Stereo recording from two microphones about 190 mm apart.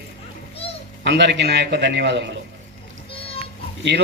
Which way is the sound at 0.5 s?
30° left (ahead or behind).